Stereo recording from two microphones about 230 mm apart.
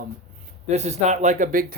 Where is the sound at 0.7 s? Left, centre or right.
Right.